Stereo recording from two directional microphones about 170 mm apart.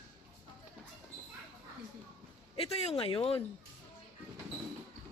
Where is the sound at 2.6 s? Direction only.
35° left (ahead or behind).